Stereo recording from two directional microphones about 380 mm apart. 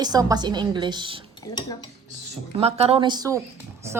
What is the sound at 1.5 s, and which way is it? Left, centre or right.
Dishes, left.